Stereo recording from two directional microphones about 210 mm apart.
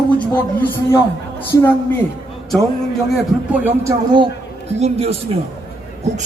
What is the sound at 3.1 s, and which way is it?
Speech, 5° right (ahead or behind).